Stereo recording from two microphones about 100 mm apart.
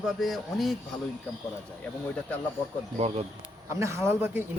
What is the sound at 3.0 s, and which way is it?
Speech, 90° right.